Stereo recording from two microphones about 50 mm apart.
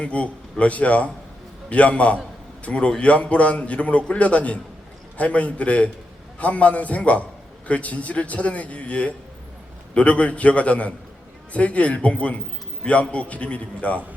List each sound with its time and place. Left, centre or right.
0.0 s a man's voice: left